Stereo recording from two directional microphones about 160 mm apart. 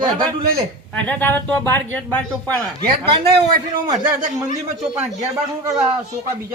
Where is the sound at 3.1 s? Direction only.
35° right (ahead or behind).